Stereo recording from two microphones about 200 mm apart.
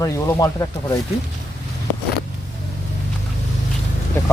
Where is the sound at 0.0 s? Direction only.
15° left (ahead or behind).